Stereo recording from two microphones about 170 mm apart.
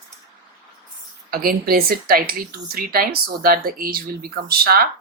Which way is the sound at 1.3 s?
60° right (ahead or behind).